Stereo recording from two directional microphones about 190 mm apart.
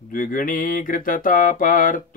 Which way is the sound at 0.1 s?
45° left (ahead or behind).